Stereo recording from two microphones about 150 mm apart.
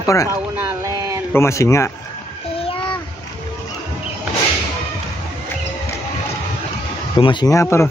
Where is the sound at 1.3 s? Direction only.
20° left (ahead or behind).